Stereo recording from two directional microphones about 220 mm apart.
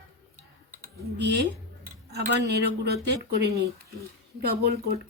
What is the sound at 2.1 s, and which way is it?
Speech, 45° right (ahead or behind).